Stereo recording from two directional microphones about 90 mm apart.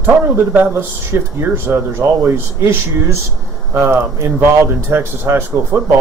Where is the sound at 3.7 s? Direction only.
25° right (ahead or behind).